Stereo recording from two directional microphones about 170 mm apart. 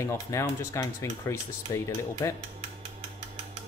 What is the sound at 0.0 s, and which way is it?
Speech, 15° left (ahead or behind).